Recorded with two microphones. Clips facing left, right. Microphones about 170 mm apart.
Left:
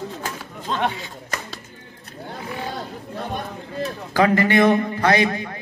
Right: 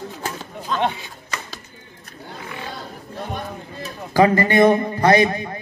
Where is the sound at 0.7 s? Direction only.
30° left (ahead or behind).